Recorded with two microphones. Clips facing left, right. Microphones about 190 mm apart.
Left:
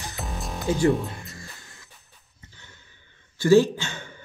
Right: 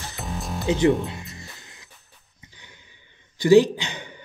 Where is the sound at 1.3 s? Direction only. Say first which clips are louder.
Right 1 dB; 20° right (ahead or behind).